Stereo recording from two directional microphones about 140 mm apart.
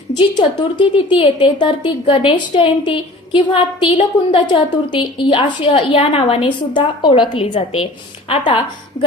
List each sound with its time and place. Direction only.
0.2 s a woman's voice: 35° left (ahead or behind)